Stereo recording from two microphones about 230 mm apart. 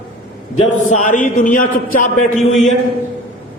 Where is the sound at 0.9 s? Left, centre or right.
Left.